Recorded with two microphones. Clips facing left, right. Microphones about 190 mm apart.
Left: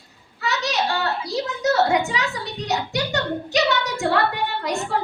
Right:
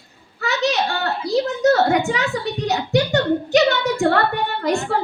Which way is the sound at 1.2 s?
55° right (ahead or behind).